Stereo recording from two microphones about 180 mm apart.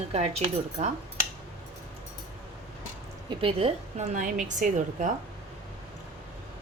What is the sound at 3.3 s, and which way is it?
A woman's voice, 30° right (ahead or behind).